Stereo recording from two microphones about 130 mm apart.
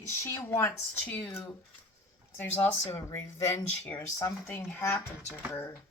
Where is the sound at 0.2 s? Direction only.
20° left (ahead or behind).